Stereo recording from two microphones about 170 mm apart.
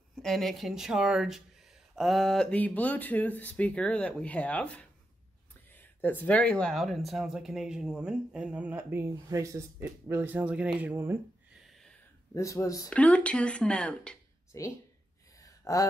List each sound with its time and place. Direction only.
0.1 s speech: centre (ahead or behind)
12.4 s speech: 20° left (ahead or behind)
12.9 s speech: 5° left (ahead or behind)
14.5 s speech: 15° left (ahead or behind)
15.4 s gasp: 20° left (ahead or behind)